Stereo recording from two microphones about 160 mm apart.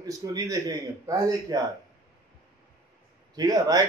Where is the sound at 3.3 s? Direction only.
25° right (ahead or behind).